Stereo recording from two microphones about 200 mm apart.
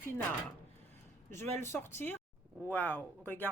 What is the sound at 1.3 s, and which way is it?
Speech, 10° left (ahead or behind).